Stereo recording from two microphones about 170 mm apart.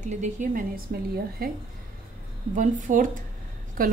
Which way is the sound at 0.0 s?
45° right (ahead or behind).